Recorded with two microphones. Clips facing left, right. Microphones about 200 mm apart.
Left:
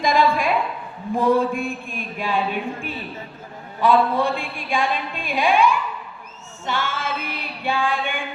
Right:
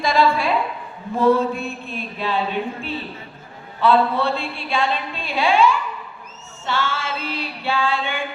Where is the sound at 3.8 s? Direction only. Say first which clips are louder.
Even; 10° left (ahead or behind).